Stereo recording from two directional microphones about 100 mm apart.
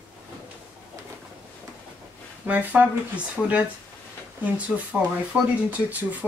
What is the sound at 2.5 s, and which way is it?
Speech, 15° right (ahead or behind).